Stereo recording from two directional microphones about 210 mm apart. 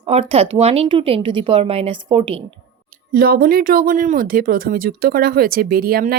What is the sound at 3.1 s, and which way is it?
Speech, 45° right (ahead or behind).